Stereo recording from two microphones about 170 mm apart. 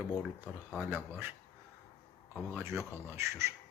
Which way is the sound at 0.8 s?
10° right (ahead or behind).